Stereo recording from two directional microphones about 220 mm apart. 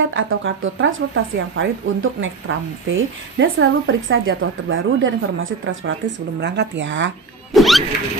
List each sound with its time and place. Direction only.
0.1 s speech: 60° right (ahead or behind)
7.5 s rodents: centre (ahead or behind)